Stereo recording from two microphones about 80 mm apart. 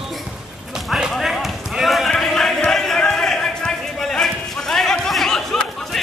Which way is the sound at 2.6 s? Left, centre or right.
Centre.